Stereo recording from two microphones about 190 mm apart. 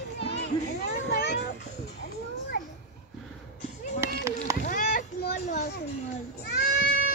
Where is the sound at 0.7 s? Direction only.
60° left (ahead or behind).